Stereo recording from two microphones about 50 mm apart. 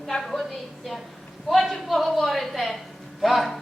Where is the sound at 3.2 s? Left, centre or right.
Centre.